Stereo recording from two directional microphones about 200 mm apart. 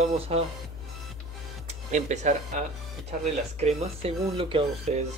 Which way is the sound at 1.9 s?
35° right (ahead or behind).